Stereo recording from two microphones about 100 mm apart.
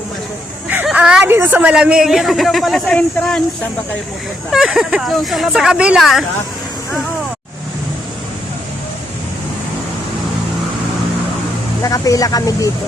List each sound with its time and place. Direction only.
0.9 s a sound: 10° right (ahead or behind)
1.3 s a woman's voice: 20° right (ahead or behind)
1.7 s a man's voice: 10° right (ahead or behind); by 3.4 s 10° left (ahead or behind)
4.5 s a man's voice: 5° right (ahead or behind)
11.8 s speech: 35° left (ahead or behind)